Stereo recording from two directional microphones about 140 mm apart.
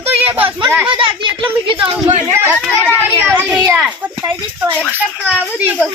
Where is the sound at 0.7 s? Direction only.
10° right (ahead or behind).